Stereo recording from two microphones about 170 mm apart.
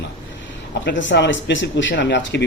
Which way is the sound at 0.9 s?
90° left.